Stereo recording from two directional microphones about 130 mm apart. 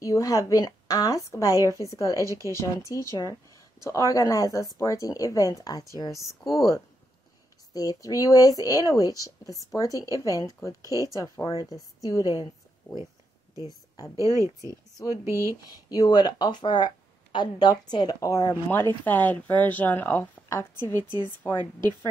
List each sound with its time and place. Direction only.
0.0 s speech: 25° left (ahead or behind)
2.2 s speech: 25° right (ahead or behind)
2.5 s speech: 25° left (ahead or behind)
12.9 s a woman's voice: 10° left (ahead or behind)
13.7 s a woman's voice: 25° left (ahead or behind)
14.1 s speech: 25° right (ahead or behind)
15.9 s a woman's voice: 30° left (ahead or behind)